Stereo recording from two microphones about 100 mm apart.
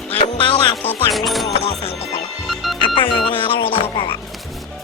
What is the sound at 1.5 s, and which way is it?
Music, 85° left.